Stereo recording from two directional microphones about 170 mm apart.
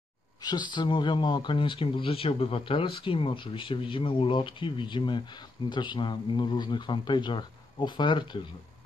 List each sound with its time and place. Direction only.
0.4 s speech: 25° left (ahead or behind)